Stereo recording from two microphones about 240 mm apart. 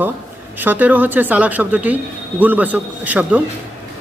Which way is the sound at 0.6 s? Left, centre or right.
Centre.